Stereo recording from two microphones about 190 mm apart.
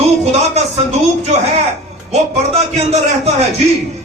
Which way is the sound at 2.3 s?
35° right (ahead or behind).